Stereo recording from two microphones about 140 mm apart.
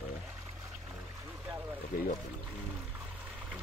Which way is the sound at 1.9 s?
70° left (ahead or behind).